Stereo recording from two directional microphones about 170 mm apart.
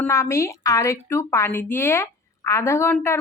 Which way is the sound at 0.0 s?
15° left (ahead or behind).